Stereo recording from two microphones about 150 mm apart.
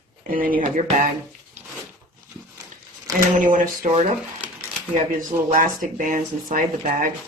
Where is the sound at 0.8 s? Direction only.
60° right (ahead or behind).